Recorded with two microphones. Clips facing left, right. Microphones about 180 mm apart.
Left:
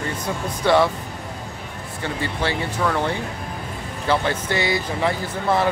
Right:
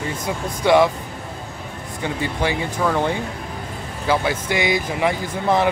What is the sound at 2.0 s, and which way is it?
Speech, 15° right (ahead or behind).